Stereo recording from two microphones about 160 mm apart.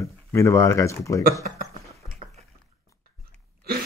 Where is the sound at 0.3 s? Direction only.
15° left (ahead or behind).